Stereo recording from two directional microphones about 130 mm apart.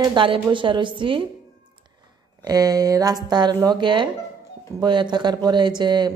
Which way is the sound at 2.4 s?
30° right (ahead or behind).